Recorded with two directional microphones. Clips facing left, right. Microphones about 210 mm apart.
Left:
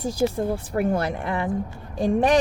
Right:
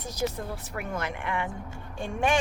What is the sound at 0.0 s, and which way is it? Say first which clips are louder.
Speech: left 8 dB; 30° left (ahead or behind).